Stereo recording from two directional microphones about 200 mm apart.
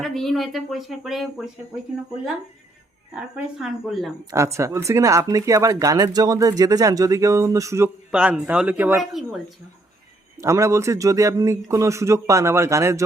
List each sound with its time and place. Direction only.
0.0 s speech: centre (ahead or behind)
3.2 s speech: 5° right (ahead or behind)
4.3 s speech: 15° right (ahead or behind)
10.3 s speech: 15° right (ahead or behind)